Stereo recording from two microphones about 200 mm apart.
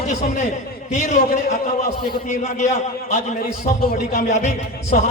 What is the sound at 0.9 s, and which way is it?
A man's voice, 35° left (ahead or behind).